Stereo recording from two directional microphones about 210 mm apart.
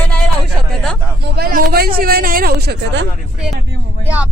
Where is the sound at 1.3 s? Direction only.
45° right (ahead or behind).